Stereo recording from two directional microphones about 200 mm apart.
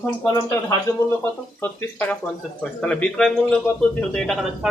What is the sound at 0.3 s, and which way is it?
Speech, 15° left (ahead or behind).